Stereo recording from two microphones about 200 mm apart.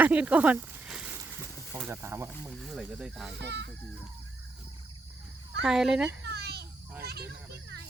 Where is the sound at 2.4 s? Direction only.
Centre (ahead or behind).